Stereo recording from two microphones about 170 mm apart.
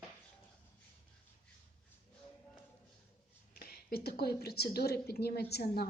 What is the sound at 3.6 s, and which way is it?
A woman's voice, 65° left (ahead or behind).